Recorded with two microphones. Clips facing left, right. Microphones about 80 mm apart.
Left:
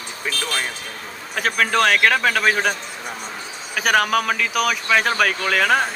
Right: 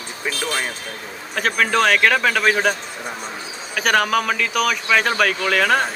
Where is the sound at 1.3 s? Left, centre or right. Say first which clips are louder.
Right 1 dB; centre.